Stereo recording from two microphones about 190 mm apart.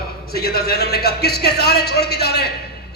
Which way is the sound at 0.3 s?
55° left (ahead or behind).